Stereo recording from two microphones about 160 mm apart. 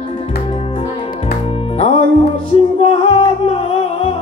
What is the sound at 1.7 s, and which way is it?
Music, 35° left (ahead or behind).